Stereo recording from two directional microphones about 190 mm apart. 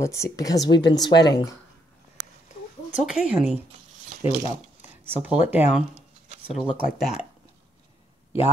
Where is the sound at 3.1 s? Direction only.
5° right (ahead or behind).